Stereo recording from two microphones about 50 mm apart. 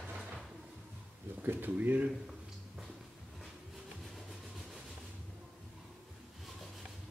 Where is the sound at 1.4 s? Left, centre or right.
Right.